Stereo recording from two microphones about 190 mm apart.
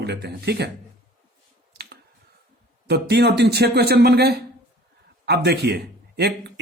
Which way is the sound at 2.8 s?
60° right (ahead or behind).